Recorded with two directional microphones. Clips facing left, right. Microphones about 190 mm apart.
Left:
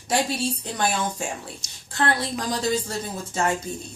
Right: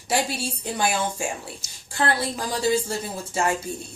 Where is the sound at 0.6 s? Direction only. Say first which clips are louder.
Right 1 dB; 10° right (ahead or behind).